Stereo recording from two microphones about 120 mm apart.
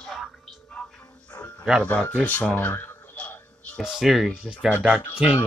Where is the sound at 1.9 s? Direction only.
15° left (ahead or behind).